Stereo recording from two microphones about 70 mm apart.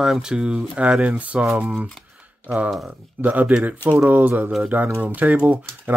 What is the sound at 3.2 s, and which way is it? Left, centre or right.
Speech, right.